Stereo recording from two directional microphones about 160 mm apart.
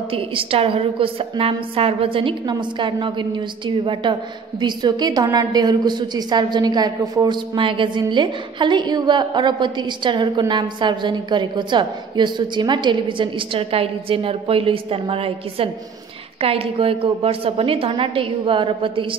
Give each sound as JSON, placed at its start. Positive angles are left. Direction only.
{"t": 0.1, "sound": "a woman's voice", "side_deg": -35}